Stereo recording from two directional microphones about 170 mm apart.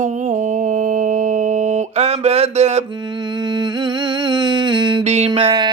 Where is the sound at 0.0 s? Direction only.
45° right (ahead or behind).